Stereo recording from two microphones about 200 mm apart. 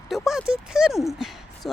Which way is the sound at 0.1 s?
Centre (ahead or behind).